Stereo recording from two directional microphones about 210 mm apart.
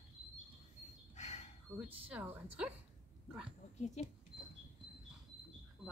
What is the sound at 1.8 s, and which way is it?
Speech, 5° right (ahead or behind).